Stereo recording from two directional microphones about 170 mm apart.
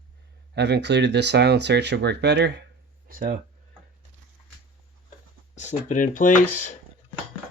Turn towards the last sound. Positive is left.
turn(degrees=50)  # may be behind; listen again after turning